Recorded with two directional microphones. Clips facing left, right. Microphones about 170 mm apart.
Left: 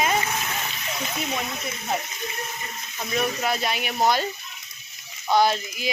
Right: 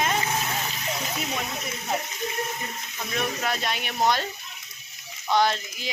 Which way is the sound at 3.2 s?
5° left (ahead or behind).